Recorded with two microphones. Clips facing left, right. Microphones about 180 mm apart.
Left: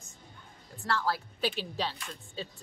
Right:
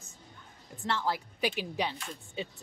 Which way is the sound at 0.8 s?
20° right (ahead or behind).